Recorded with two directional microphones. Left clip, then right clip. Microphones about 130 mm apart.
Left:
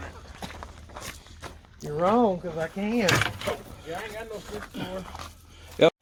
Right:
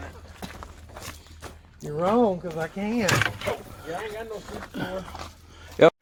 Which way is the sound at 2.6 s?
65° left (ahead or behind).